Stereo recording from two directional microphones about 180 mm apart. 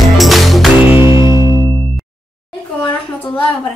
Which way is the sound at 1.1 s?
25° left (ahead or behind).